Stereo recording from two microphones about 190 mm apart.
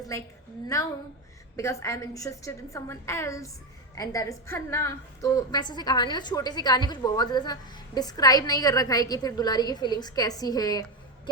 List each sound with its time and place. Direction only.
0.1 s a woman's voice: 15° left (ahead or behind)